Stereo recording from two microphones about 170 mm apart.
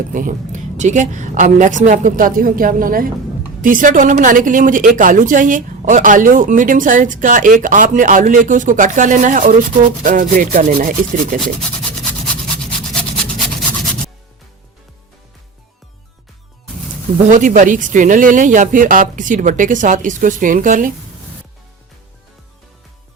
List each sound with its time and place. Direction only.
0.1 s a woman's voice: 50° right (ahead or behind)
12.2 s a sound: 5° left (ahead or behind)
17.2 s a woman's voice: 50° right (ahead or behind)